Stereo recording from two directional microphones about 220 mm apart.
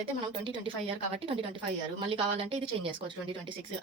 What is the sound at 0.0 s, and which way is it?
Speech, 20° right (ahead or behind).